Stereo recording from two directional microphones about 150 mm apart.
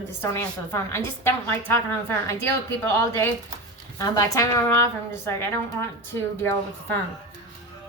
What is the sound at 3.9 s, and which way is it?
A woman's voice, 20° left (ahead or behind).